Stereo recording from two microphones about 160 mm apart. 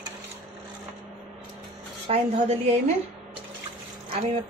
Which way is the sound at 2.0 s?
40° right (ahead or behind).